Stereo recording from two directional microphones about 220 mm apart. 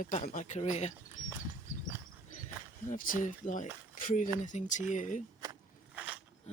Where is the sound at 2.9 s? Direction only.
35° left (ahead or behind).